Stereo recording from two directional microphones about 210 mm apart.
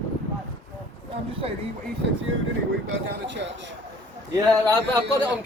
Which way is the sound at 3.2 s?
60° right (ahead or behind).